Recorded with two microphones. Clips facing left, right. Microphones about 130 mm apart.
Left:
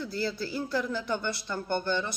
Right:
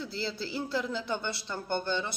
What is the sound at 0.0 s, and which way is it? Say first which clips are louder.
A man's voice: left 3 dB; 25° right (ahead or behind).